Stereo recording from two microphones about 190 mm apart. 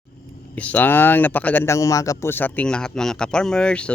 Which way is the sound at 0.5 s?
5° left (ahead or behind).